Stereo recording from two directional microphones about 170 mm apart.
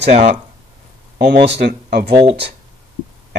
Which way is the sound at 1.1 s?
90° right.